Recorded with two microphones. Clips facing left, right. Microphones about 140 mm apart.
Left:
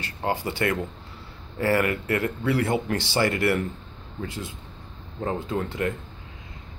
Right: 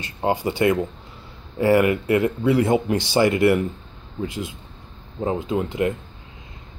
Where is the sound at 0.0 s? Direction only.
20° right (ahead or behind).